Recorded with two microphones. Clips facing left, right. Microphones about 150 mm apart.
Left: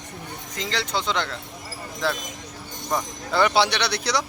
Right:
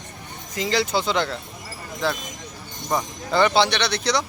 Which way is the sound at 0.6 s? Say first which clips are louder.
Right 5 dB; 10° right (ahead or behind).